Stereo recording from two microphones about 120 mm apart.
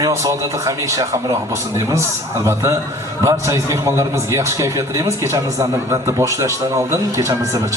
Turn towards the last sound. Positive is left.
turn(degrees=-25)  # may be behind; listen again after turning